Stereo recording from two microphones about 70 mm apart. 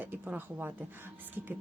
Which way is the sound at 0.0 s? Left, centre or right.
Right.